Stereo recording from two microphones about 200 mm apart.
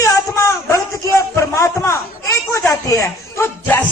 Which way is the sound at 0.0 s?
15° left (ahead or behind).